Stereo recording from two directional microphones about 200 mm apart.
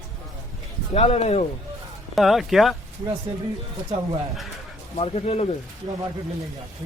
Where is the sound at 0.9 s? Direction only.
30° left (ahead or behind).